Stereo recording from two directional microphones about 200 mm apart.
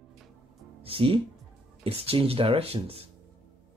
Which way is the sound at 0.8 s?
25° right (ahead or behind).